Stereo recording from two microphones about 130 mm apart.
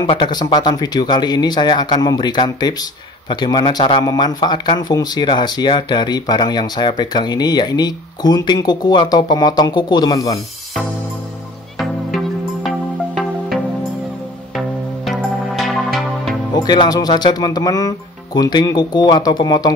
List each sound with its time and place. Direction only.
0.0 s speech: 35° left (ahead or behind)
11.8 s music: centre (ahead or behind)
15.0 s music: centre (ahead or behind)
16.5 s speech: 35° left (ahead or behind)